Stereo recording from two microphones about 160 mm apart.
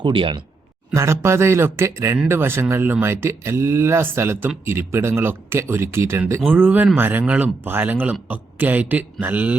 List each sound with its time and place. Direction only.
0.0 s speech: 30° right (ahead or behind)
0.9 s speech: 15° right (ahead or behind)